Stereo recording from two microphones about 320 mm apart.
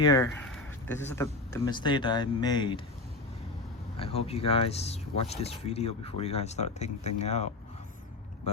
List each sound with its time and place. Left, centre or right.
0.0 s speech: centre
3.9 s speech: centre